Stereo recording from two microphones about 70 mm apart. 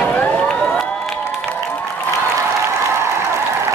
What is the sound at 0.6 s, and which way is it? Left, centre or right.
Cheering, centre.